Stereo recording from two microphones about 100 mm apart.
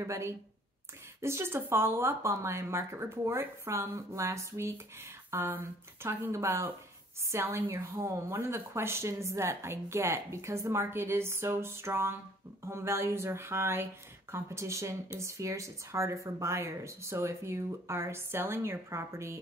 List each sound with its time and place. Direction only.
0.0 s speech: 30° right (ahead or behind)